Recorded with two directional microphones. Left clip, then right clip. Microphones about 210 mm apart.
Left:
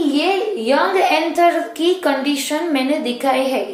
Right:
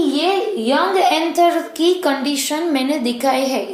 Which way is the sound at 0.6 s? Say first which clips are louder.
Even; 35° right (ahead or behind).